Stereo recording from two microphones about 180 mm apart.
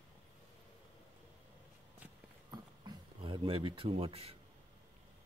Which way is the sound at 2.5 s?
25° right (ahead or behind).